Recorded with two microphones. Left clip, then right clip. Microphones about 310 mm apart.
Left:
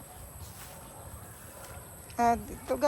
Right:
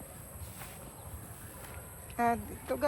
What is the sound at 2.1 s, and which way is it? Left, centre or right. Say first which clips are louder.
Speech: left 4 dB; centre.